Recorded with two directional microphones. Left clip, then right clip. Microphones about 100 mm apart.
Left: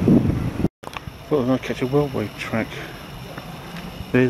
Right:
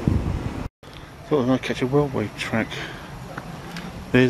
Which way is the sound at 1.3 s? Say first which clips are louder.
Even; 5° right (ahead or behind).